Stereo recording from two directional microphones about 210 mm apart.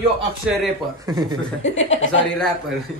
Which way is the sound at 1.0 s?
20° right (ahead or behind).